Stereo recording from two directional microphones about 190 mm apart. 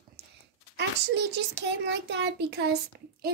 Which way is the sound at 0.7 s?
65° right (ahead or behind).